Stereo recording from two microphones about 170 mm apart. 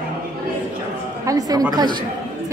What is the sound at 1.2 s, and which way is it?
Speech, 20° right (ahead or behind).